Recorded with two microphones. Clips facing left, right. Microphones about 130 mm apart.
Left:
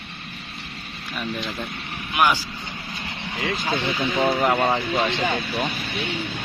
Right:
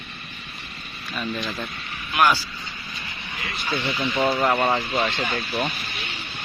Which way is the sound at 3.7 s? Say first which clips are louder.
Right 1 dB; 50° left (ahead or behind).